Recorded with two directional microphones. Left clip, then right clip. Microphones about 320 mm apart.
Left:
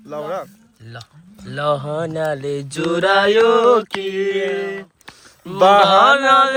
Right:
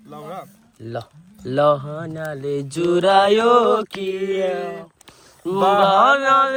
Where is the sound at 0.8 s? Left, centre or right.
Centre.